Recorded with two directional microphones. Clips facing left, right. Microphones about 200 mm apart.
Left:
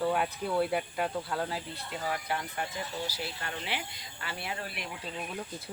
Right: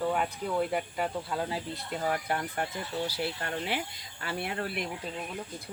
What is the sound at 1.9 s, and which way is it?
Speech, 45° right (ahead or behind).